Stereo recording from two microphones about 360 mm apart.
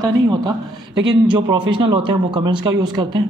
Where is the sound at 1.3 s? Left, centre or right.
Centre.